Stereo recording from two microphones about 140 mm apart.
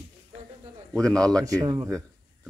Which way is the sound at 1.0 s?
5° left (ahead or behind).